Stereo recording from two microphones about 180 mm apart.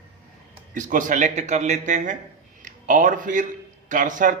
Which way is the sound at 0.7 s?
45° right (ahead or behind).